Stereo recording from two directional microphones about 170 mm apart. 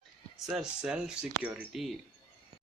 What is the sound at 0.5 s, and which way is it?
Speech, 5° right (ahead or behind).